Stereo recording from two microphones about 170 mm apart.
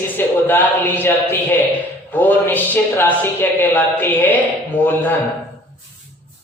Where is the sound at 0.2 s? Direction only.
10° left (ahead or behind).